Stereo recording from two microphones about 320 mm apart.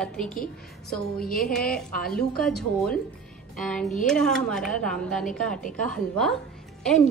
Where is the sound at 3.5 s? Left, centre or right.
Centre.